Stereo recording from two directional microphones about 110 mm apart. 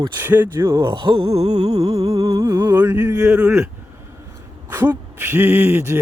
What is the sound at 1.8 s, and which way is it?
Music, 35° right (ahead or behind).